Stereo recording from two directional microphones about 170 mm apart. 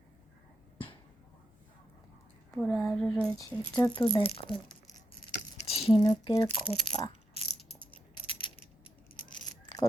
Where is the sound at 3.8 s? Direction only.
30° left (ahead or behind).